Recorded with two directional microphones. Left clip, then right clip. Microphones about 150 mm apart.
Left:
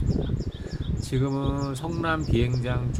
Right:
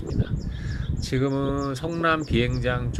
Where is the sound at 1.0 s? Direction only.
Centre (ahead or behind).